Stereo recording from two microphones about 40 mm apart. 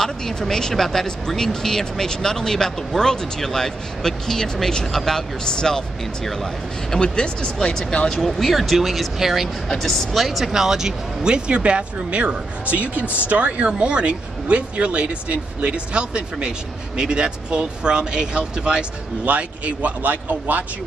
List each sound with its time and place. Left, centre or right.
0.0 s speech: centre
8.1 s speech: centre
10.2 s speech: centre
11.2 s speech: right
19.2 s speech: right